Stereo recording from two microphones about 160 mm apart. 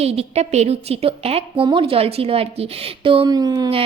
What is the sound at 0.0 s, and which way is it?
Speech, 40° right (ahead or behind).